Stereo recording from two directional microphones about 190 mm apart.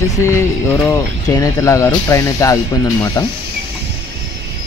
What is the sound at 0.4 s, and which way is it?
Speech, 20° left (ahead or behind).